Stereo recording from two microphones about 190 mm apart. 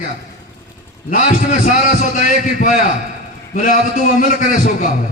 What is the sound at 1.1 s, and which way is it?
A man's voice, 45° left (ahead or behind).